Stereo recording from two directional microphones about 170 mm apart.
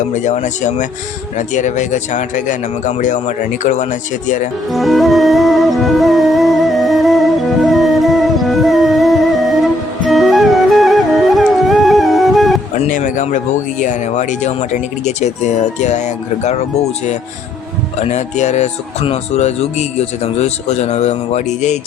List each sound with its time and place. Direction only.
0.1 s speech: 45° left (ahead or behind)
4.7 s music: centre (ahead or behind)
12.9 s speech: 50° left (ahead or behind)